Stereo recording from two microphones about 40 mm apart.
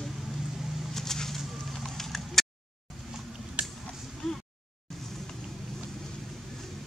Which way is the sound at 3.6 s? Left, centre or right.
Right.